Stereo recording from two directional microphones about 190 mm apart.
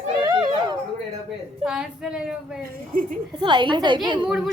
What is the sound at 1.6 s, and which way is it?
Speech, 5° right (ahead or behind).